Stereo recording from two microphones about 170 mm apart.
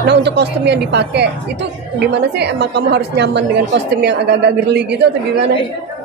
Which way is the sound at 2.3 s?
85° right.